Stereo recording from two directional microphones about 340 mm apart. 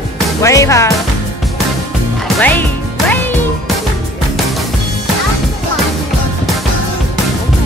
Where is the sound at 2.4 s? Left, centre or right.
Centre.